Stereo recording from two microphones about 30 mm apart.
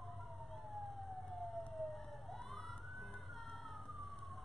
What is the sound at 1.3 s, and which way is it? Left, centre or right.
Emergency vehicle, centre.